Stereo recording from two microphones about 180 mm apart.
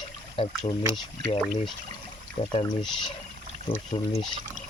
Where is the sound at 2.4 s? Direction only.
35° left (ahead or behind).